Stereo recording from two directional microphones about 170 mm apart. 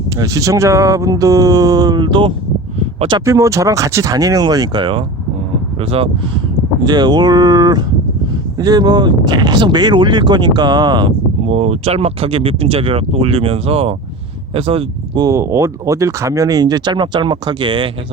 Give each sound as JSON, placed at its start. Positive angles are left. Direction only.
{"t": 0.2, "sound": "speech", "side_deg": -20}
{"t": 11.4, "sound": "speech", "side_deg": -40}